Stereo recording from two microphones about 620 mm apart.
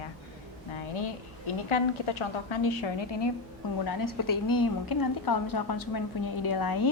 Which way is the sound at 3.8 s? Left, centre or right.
Left.